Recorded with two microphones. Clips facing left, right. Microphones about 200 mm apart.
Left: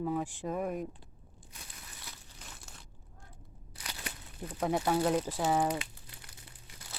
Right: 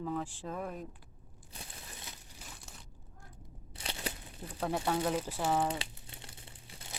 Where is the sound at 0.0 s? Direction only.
10° left (ahead or behind).